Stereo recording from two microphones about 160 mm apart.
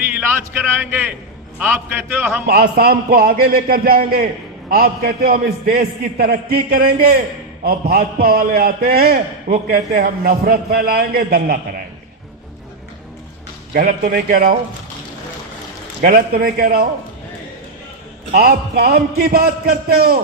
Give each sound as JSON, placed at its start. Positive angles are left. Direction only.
{"t": 0.2, "sound": "a man's voice", "side_deg": -15}
{"t": 2.5, "sound": "a man's voice", "side_deg": -75}
{"t": 13.7, "sound": "a man's voice", "side_deg": -60}
{"t": 16.0, "sound": "a man's voice", "side_deg": -70}
{"t": 18.3, "sound": "a man's voice", "side_deg": -75}